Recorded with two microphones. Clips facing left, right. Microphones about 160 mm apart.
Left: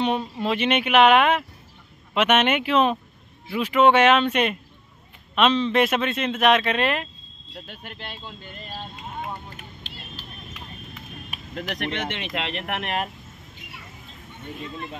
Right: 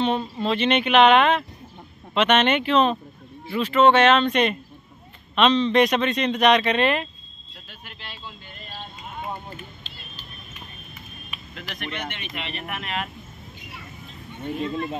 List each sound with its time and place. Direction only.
0.0 s speech: 10° left (ahead or behind)
7.6 s speech: 55° left (ahead or behind)
9.6 s vehicle: 85° left
11.2 s a sound: 45° left (ahead or behind)
11.7 s speech: 65° left (ahead or behind)
12.1 s speech: 90° left; by 12.9 s 70° left (ahead or behind)